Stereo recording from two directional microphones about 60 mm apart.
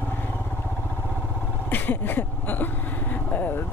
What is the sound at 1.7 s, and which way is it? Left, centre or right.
Vehicle, left.